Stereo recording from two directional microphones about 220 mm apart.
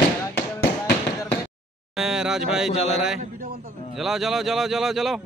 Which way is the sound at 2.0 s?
5° right (ahead or behind).